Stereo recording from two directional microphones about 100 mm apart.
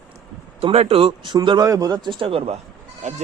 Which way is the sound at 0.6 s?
80° right.